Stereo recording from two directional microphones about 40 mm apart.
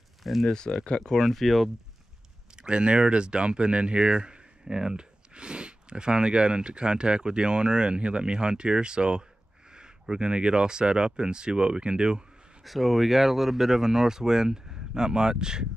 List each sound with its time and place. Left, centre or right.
0.2 s speech: centre
0.8 s speech: centre
1.2 s speech: centre
2.5 s speech: right
12.6 s speech: centre